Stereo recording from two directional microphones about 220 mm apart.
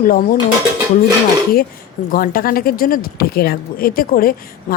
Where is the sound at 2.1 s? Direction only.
40° left (ahead or behind).